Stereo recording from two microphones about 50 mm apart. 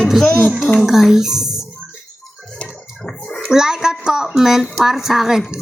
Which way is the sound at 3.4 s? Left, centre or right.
Centre.